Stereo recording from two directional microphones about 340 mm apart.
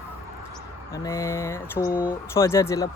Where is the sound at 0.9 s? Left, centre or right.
Centre.